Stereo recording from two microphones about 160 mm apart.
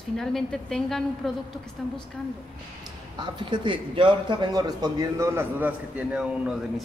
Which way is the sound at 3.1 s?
30° right (ahead or behind).